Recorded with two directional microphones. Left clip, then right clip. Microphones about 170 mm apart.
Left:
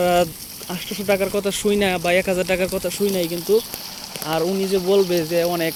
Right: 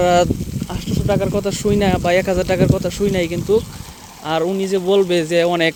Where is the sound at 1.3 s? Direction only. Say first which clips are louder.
Right 2 dB; 15° right (ahead or behind).